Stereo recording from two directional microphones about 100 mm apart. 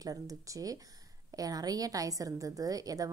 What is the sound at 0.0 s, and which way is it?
A woman's voice, 35° right (ahead or behind).